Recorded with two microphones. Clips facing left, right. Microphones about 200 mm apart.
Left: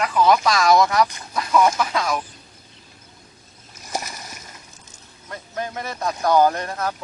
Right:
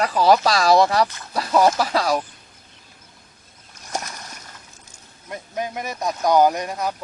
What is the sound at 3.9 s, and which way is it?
Splash, centre (ahead or behind).